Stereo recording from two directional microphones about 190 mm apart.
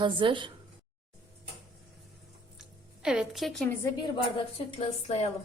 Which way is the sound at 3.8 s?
25° left (ahead or behind).